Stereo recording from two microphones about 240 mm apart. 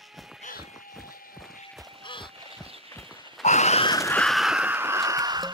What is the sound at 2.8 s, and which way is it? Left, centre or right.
Clip-clop, centre.